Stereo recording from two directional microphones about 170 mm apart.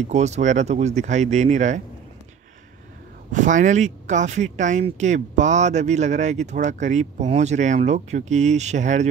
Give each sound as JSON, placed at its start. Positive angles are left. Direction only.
{"t": 0.0, "sound": "speech", "side_deg": -40}
{"t": 3.3, "sound": "speech", "side_deg": -50}